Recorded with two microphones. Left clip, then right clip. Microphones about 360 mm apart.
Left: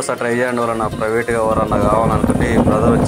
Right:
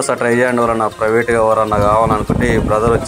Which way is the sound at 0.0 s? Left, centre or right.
Left.